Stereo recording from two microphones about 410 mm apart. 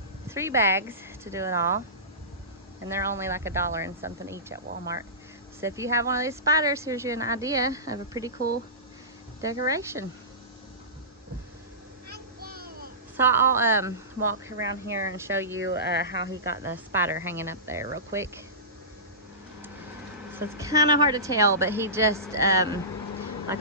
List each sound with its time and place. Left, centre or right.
0.3 s speech: centre
2.8 s speech: centre
5.6 s speech: centre
9.4 s speech: centre
12.1 s a sound: right
13.2 s a woman's voice: centre
14.7 s speech: right
15.1 s speech: centre
20.3 s speech: centre